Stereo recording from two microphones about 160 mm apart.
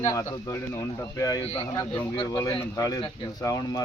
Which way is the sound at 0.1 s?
20° left (ahead or behind).